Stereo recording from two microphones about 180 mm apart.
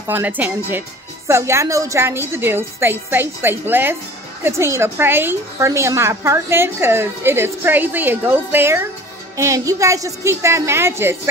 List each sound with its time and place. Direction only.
0.0 s a woman's voice: 10° right (ahead or behind)